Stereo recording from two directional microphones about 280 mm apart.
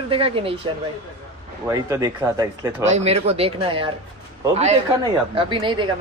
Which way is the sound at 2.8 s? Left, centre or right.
Right.